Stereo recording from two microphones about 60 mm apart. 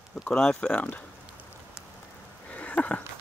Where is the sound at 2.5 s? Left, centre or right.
Left.